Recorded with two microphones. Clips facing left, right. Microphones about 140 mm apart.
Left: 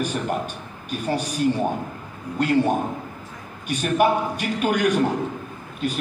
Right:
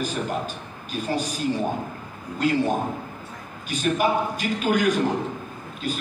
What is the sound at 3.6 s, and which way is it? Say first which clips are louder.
A man's voice: left 3 dB; 60° left (ahead or behind).